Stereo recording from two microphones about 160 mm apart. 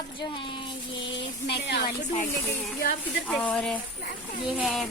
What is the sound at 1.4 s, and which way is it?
Speech, 90° left.